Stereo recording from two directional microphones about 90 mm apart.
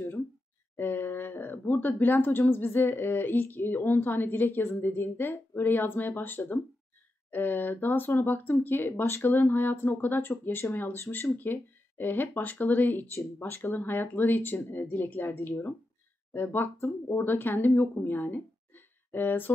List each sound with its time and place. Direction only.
0.7 s speech: 20° left (ahead or behind)